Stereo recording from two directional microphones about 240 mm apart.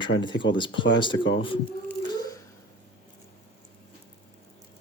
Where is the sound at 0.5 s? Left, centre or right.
Centre.